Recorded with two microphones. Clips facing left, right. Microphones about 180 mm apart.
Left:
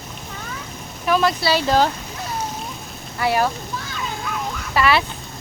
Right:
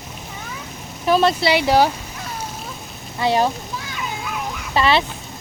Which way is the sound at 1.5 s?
15° right (ahead or behind).